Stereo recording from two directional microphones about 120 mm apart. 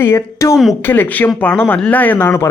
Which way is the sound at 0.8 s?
15° left (ahead or behind).